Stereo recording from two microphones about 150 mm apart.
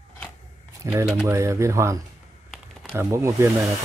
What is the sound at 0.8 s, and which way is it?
Speech, 20° right (ahead or behind).